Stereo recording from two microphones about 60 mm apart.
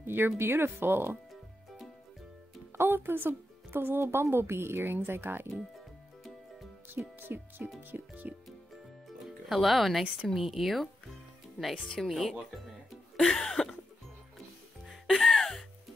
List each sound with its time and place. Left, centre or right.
0.0 s speech: right
2.8 s speech: right
4.0 s speech: right
7.2 s speech: right
9.5 s speech: centre
12.0 s speech: centre
15.1 s music: centre